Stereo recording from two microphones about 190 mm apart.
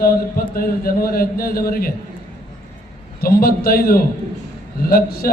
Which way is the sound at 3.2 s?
50° left (ahead or behind).